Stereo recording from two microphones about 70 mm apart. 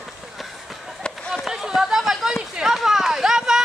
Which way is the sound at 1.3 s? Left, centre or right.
Centre.